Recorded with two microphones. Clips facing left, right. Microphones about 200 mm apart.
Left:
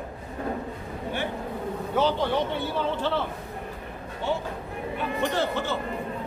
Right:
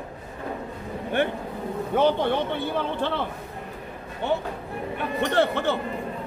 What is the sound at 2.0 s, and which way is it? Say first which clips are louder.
Speech: right 3 dB; 55° right (ahead or behind).